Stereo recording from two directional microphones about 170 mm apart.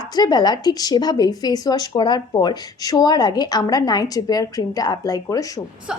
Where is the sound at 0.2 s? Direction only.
25° left (ahead or behind).